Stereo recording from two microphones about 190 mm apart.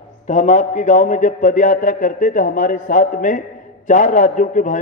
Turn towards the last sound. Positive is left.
turn(degrees=40)  # may be behind; listen again after turning